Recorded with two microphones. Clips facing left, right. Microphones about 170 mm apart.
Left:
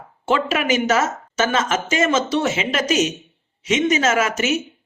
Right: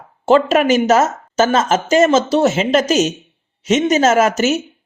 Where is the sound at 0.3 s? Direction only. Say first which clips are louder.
Right 7 dB; 40° right (ahead or behind).